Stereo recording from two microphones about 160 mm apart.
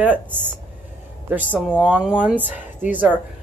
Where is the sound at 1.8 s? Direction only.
5° right (ahead or behind).